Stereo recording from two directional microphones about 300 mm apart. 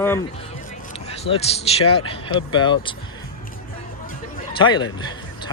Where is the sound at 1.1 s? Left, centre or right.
Centre.